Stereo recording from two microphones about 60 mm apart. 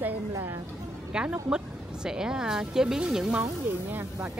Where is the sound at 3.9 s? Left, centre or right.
Right.